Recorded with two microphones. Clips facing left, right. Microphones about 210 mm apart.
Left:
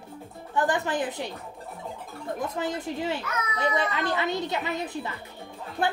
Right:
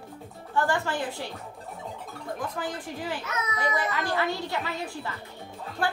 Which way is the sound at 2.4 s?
25° left (ahead or behind).